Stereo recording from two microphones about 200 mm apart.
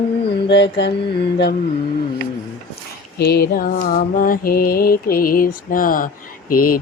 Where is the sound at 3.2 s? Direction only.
50° left (ahead or behind).